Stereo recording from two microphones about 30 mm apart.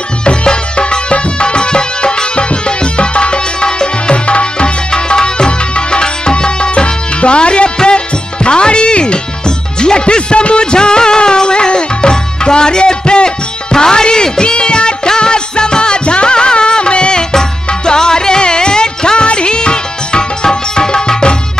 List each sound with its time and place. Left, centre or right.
0.2 s music: left
17.3 s music: left